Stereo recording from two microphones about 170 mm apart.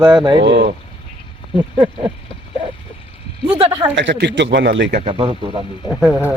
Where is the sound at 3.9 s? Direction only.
90° right.